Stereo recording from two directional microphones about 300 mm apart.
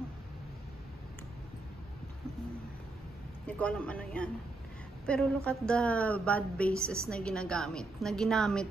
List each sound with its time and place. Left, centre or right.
3.4 s speech: centre